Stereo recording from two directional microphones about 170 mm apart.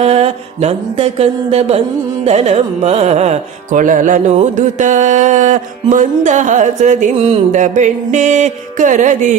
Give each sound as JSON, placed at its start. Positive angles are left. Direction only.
{"t": 0.0, "sound": "carnatic music", "side_deg": -40}
{"t": 4.5, "sound": "music", "side_deg": -45}